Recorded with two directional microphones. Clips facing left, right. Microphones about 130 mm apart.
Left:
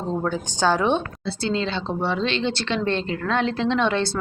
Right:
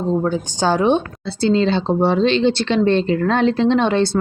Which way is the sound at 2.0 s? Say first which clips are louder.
Right 8 dB; 50° right (ahead or behind).